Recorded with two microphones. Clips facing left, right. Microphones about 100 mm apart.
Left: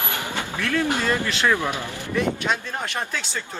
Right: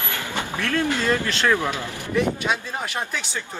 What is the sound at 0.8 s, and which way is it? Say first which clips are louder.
Speech: right 1 dB; 20° left (ahead or behind).